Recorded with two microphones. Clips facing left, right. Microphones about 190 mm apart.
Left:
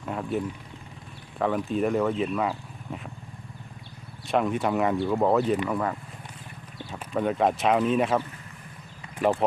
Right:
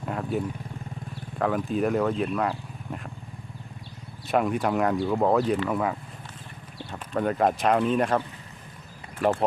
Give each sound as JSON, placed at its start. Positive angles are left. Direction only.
{"t": 0.0, "sound": "speech", "side_deg": 0}
{"t": 4.3, "sound": "speech", "side_deg": 0}